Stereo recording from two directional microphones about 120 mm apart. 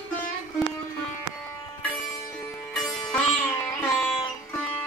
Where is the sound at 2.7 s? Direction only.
5° left (ahead or behind).